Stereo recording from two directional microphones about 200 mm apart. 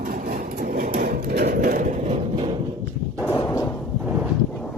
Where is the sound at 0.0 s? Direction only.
45° right (ahead or behind).